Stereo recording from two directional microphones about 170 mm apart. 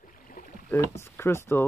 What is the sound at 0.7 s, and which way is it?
Speech, 15° left (ahead or behind).